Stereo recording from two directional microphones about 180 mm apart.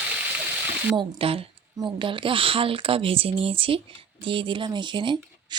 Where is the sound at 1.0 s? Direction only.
30° right (ahead or behind).